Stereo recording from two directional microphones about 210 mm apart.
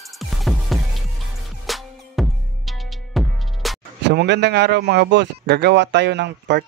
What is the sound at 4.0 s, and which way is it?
Speech, 55° right (ahead or behind).